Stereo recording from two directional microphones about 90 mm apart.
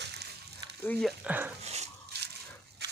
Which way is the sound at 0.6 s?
45° right (ahead or behind).